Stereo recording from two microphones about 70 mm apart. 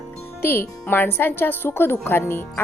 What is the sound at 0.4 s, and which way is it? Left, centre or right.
Speech, left.